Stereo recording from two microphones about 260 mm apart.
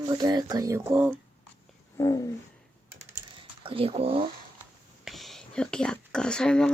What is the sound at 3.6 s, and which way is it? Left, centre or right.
Speech, right.